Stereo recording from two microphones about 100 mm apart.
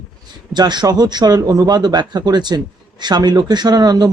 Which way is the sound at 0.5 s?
45° right (ahead or behind).